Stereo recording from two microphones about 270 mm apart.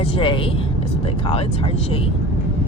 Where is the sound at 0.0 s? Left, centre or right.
Left.